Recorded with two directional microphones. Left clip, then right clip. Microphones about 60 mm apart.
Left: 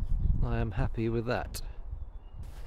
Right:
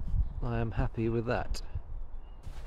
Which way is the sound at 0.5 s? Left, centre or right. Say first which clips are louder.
Right 1 dB; left.